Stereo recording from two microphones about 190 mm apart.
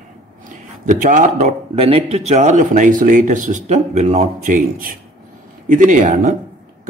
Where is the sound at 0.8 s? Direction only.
40° right (ahead or behind).